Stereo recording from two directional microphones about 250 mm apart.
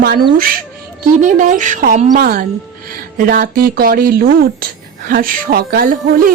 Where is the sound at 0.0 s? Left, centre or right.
Right.